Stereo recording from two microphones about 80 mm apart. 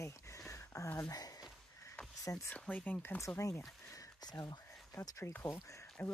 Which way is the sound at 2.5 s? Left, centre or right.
Centre.